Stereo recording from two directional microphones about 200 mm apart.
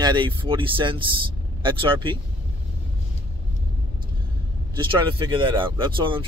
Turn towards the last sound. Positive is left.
turn(degrees=-25)  # may be behind; listen again after turning